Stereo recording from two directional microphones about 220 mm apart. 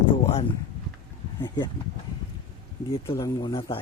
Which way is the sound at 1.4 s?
20° left (ahead or behind).